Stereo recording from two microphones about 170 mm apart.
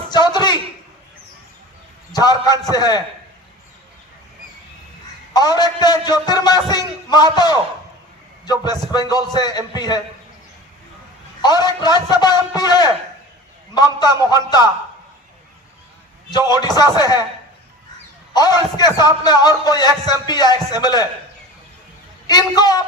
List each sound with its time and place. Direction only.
0.1 s a sound: 25° left (ahead or behind)
2.1 s a man's voice: 20° left (ahead or behind)
5.3 s a man's voice: 25° left (ahead or behind)
8.9 s a man's voice: 25° left (ahead or behind)
11.4 s a man's voice: 25° left (ahead or behind)
16.5 s a man's voice: 25° left (ahead or behind)
18.3 s a man's voice: 25° left (ahead or behind)
22.3 s a man's voice: 25° left (ahead or behind)